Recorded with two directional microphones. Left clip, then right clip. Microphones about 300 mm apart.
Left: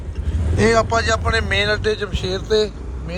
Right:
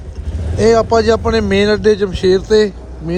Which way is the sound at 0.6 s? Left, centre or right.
Centre.